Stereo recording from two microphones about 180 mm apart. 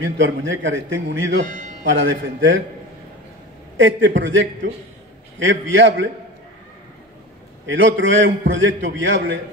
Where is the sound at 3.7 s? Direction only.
90° right.